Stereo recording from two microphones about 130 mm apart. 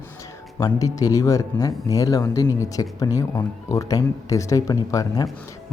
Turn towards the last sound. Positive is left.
turn(degrees=30)  # may be behind; listen again after turning